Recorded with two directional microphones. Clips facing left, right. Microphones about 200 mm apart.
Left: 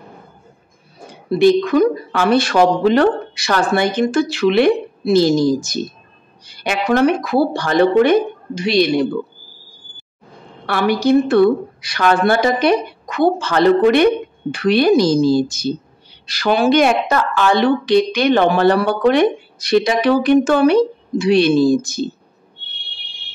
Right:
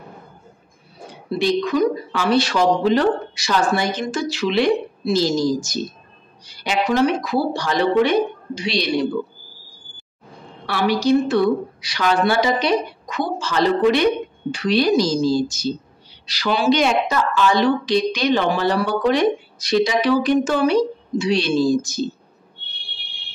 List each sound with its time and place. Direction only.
1.4 s a woman's voice: 55° left (ahead or behind)
10.7 s a woman's voice: 55° left (ahead or behind)